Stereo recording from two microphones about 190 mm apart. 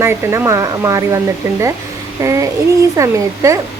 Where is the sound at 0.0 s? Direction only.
15° right (ahead or behind).